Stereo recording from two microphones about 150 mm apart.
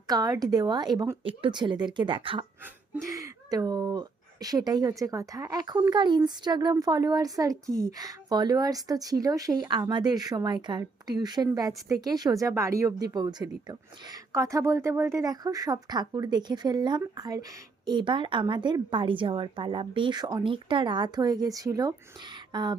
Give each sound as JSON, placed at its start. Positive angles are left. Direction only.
{"t": 0.1, "sound": "speech", "side_deg": -25}
{"t": 3.1, "sound": "a woman's voice", "side_deg": -20}